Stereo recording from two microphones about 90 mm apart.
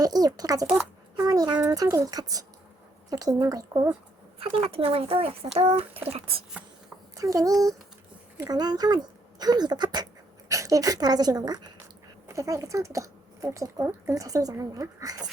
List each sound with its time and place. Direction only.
0.0 s a woman's voice: 45° right (ahead or behind)
4.4 s speech: 90° right
7.2 s a woman's voice: 40° right (ahead or behind)
10.5 s speech: 35° right (ahead or behind)
12.3 s a woman's voice: 35° right (ahead or behind)